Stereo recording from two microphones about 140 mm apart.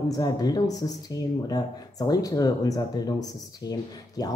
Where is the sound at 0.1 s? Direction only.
25° left (ahead or behind).